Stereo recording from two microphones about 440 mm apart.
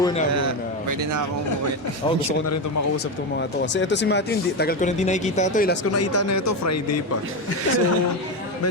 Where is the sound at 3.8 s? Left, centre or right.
Left.